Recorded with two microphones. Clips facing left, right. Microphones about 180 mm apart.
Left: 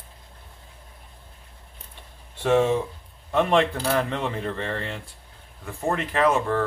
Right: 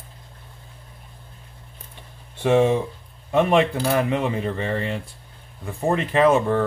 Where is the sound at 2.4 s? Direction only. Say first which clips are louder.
Right 2 dB; 15° right (ahead or behind).